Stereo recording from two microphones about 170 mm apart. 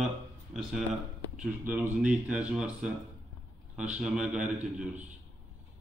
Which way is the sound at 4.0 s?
5° right (ahead or behind).